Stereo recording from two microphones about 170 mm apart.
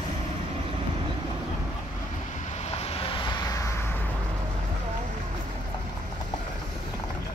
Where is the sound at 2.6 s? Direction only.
35° left (ahead or behind); by 3.7 s 20° left (ahead or behind).